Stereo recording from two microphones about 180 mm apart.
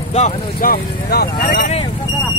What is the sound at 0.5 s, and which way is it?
Speech, 55° left (ahead or behind).